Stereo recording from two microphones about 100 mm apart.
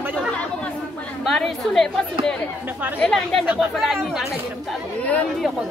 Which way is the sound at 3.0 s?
5° left (ahead or behind).